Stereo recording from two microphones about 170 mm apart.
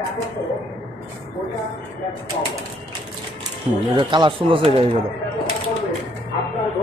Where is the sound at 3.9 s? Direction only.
30° right (ahead or behind).